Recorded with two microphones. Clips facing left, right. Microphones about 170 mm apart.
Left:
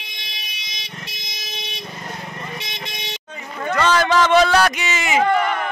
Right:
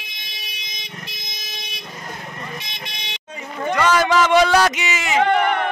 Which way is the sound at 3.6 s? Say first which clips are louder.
Even; 10° right (ahead or behind).